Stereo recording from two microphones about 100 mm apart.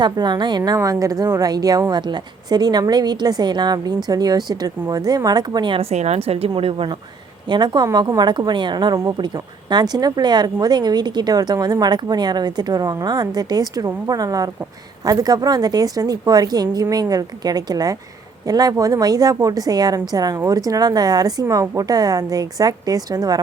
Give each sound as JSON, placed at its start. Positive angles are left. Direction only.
{"t": 0.0, "sound": "a woman's voice", "side_deg": -50}
{"t": 5.7, "sound": "a woman's voice", "side_deg": -90}
{"t": 6.6, "sound": "speech", "side_deg": -65}
{"t": 7.4, "sound": "a woman's voice", "side_deg": -50}